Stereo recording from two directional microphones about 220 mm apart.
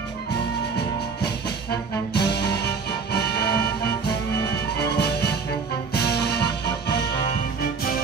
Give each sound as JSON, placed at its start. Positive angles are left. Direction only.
{"t": 1.2, "sound": "music", "side_deg": 50}
{"t": 4.7, "sound": "music", "side_deg": 50}